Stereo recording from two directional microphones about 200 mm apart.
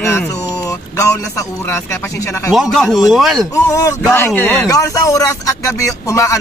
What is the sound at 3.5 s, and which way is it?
Speech, 15° left (ahead or behind).